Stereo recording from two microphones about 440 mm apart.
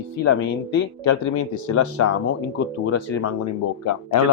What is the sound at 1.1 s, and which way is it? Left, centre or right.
Speech, left.